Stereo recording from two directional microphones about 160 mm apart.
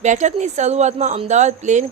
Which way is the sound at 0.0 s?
50° right (ahead or behind).